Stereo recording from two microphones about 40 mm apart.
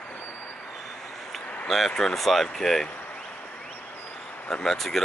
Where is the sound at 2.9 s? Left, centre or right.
Left.